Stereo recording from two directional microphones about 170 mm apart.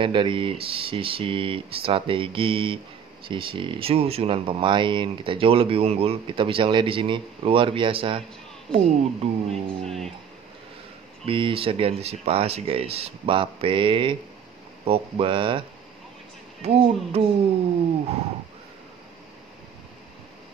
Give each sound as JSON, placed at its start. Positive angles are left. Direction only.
{"t": 0.0, "sound": "speech", "side_deg": -30}
{"t": 9.8, "sound": "speech", "side_deg": 0}
{"t": 11.2, "sound": "speech", "side_deg": -30}
{"t": 16.6, "sound": "speech", "side_deg": -35}